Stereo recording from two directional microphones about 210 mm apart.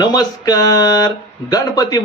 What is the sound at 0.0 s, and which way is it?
Speech, 15° left (ahead or behind).